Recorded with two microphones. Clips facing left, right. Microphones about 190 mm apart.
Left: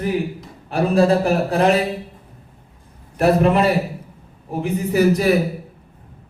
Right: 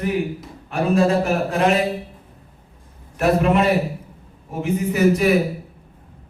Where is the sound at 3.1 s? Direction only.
35° left (ahead or behind).